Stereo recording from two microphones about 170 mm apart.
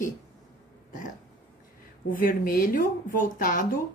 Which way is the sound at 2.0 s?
55° left (ahead or behind).